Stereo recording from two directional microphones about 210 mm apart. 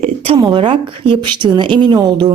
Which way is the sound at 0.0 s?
25° right (ahead or behind).